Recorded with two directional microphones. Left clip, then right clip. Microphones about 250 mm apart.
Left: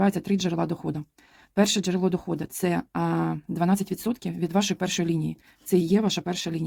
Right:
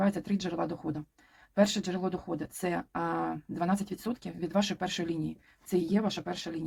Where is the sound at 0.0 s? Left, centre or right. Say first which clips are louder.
Left 6 dB; left.